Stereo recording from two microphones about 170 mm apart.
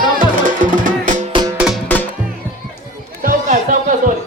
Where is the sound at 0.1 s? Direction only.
50° right (ahead or behind).